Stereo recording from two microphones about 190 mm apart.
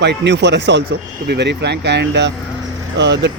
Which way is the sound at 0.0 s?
65° right (ahead or behind).